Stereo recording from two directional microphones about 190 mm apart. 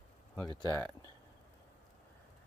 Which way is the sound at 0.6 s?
15° left (ahead or behind).